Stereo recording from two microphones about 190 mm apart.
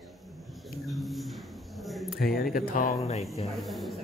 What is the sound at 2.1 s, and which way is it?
Speech, 50° left (ahead or behind).